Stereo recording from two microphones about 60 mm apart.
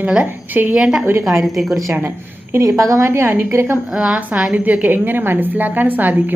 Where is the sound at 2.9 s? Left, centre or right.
Right.